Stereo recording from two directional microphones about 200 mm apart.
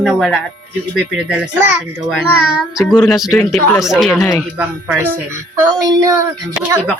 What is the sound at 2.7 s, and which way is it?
Speech, 5° right (ahead or behind).